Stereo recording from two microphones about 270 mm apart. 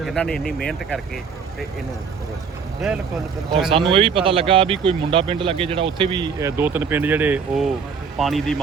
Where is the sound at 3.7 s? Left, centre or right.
Centre.